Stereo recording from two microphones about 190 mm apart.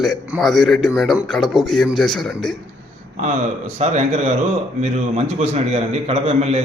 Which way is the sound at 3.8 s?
35° right (ahead or behind).